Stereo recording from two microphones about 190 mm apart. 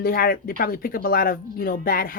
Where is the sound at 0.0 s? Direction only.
50° left (ahead or behind).